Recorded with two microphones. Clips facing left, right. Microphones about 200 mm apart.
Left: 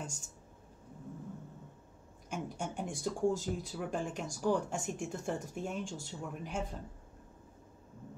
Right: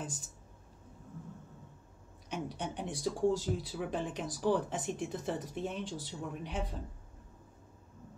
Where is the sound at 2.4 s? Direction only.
45° left (ahead or behind).